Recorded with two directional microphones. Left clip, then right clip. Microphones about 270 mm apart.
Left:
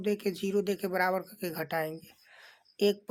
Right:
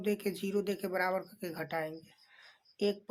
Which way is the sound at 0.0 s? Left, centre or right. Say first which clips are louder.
Left 3 dB; centre.